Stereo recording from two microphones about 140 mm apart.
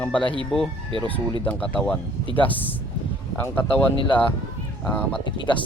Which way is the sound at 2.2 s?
40° left (ahead or behind).